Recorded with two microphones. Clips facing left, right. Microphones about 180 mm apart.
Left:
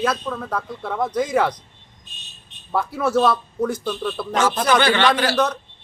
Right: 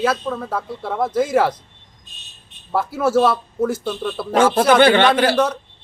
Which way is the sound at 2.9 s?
5° right (ahead or behind).